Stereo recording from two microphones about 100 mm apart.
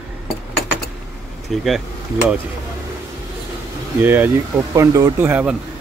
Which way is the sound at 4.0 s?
20° right (ahead or behind).